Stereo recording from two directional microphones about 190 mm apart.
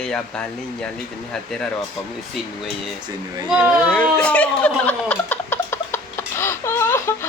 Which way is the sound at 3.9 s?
5° left (ahead or behind).